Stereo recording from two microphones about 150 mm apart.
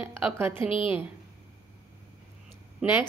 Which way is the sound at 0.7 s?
35° left (ahead or behind).